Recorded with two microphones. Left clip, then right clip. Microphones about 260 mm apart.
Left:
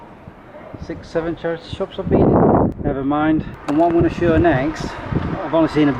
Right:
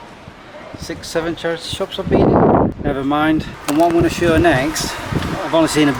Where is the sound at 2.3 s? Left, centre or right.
Centre.